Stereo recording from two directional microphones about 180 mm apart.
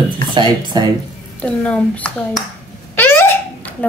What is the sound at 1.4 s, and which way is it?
Speech, 5° left (ahead or behind).